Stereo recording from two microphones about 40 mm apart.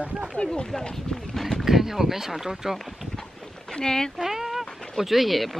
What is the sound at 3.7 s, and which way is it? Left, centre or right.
Speech, centre.